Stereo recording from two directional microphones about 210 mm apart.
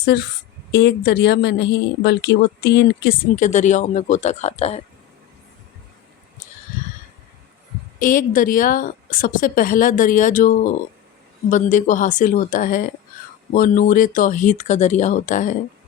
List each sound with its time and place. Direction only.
0.0 s a woman's voice: 50° left (ahead or behind); by 4.8 s 30° left (ahead or behind)
7.9 s a woman's voice: 40° left (ahead or behind)